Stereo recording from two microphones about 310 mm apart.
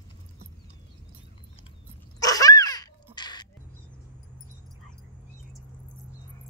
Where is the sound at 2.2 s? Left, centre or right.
Centre.